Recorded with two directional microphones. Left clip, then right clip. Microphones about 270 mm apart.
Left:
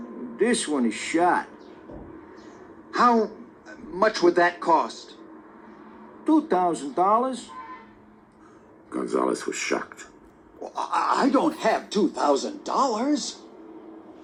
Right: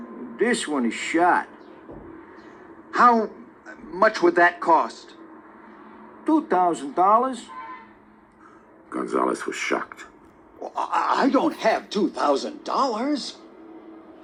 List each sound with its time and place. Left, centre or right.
0.0 s a man's voice: centre
2.9 s a woman's voice: centre
6.2 s speech: centre
8.9 s speech: centre; by 13.1 s right